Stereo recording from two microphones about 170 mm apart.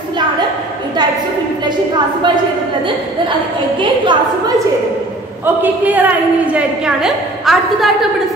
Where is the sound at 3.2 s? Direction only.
30° right (ahead or behind).